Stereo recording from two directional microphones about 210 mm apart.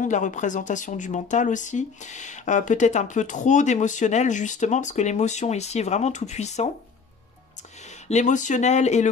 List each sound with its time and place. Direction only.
0.0 s speech: 35° left (ahead or behind)
8.1 s speech: 35° left (ahead or behind)